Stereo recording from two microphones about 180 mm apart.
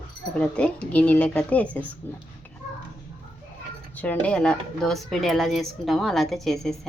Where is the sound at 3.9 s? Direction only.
10° left (ahead or behind).